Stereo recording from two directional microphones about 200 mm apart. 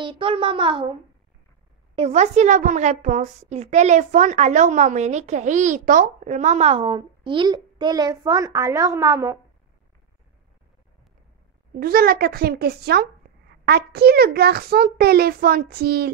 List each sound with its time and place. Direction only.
0.0 s a child's voice: 25° right (ahead or behind)
2.0 s a woman's voice: 35° right (ahead or behind); by 9.4 s 15° right (ahead or behind)
11.8 s a child's voice: 50° right (ahead or behind)